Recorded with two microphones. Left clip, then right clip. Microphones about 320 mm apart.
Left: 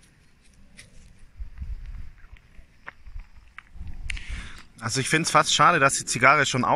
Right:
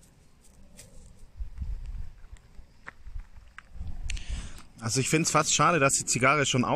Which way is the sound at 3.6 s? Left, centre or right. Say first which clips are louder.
Left 3 dB; centre.